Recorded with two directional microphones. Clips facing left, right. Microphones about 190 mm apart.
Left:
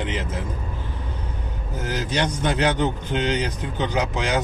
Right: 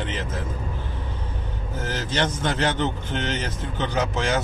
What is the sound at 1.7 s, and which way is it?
A man's voice, 10° left (ahead or behind).